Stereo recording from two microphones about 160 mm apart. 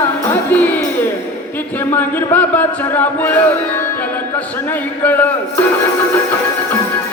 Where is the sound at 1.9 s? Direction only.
10° left (ahead or behind).